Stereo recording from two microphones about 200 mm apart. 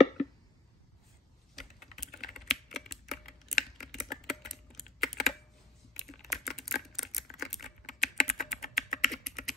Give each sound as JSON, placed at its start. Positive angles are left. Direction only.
{"t": 1.5, "sound": "typing", "side_deg": 0}